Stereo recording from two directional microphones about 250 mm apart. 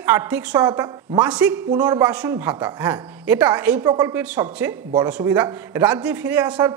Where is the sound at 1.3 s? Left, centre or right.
Centre.